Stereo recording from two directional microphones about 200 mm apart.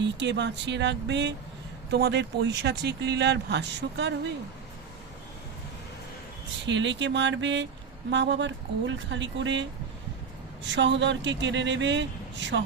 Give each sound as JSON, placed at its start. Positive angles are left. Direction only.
{"t": 0.0, "sound": "speech", "side_deg": -60}
{"t": 6.7, "sound": "speech", "side_deg": -65}
{"t": 10.7, "sound": "speech", "side_deg": -65}